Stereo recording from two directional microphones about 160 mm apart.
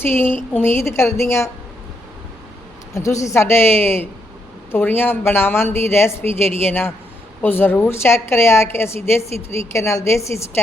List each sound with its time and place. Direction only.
0.0 s a woman's voice: 15° left (ahead or behind)
2.9 s a woman's voice: 20° left (ahead or behind)